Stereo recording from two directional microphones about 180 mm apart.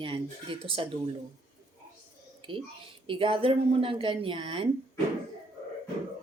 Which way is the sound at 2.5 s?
30° right (ahead or behind).